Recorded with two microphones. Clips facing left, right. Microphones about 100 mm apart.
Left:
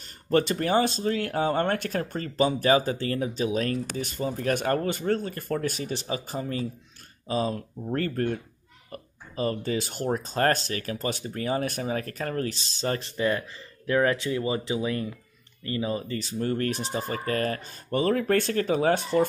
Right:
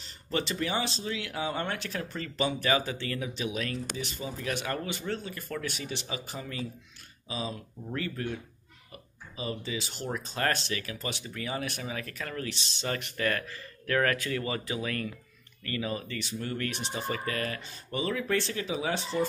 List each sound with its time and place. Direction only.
0.0 s speech: 50° left (ahead or behind)
13.2 s speech: 20° left (ahead or behind); by 19.2 s 50° left (ahead or behind)